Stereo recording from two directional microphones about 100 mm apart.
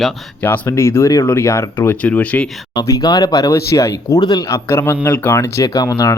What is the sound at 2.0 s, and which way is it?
Speech, 15° left (ahead or behind).